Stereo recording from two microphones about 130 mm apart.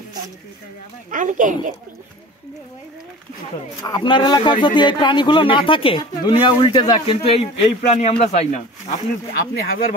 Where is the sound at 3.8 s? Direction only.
35° left (ahead or behind); by 8.6 s 55° left (ahead or behind).